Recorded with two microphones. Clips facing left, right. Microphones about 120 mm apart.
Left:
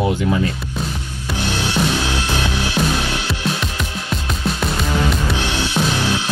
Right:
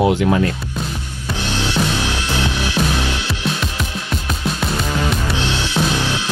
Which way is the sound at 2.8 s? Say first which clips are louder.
Even; centre (ahead or behind).